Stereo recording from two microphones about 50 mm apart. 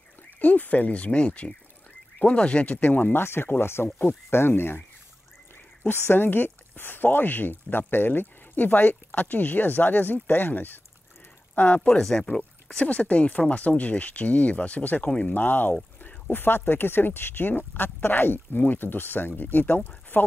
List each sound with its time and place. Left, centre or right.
0.4 s speech: left
5.9 s speech: left
11.5 s speech: left
11.9 s speech: centre
12.4 s speech: left